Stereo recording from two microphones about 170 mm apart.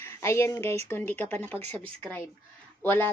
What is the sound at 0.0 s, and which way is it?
A woman's voice, 15° left (ahead or behind).